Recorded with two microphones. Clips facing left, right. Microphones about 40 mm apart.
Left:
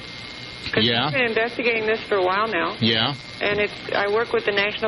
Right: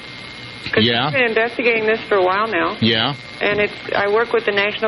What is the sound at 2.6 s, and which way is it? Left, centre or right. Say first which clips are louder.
Speech: right 4 dB; right.